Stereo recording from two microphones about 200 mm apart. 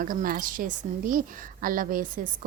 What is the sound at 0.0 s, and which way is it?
A woman's voice, 45° right (ahead or behind).